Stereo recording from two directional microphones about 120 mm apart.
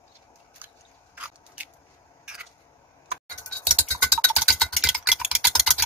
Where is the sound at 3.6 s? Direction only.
5° right (ahead or behind).